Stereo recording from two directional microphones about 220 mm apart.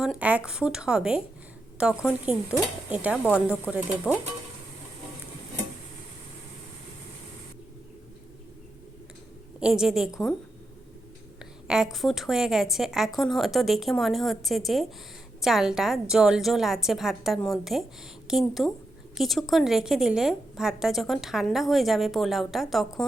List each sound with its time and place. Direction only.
0.0 s a woman's voice: 5° right (ahead or behind)
9.6 s a woman's voice: 5° right (ahead or behind)
11.7 s a woman's voice: centre (ahead or behind)